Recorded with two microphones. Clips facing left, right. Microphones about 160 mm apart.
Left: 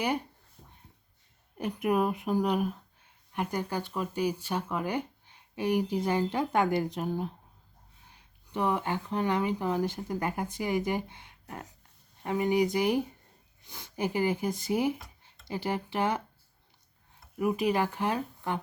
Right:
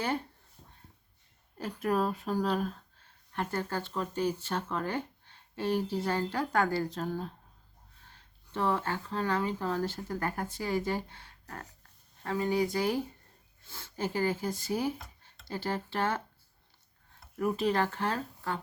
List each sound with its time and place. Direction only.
0.0 s speech: 15° left (ahead or behind)
1.5 s speech: 20° left (ahead or behind)
17.3 s speech: 10° left (ahead or behind)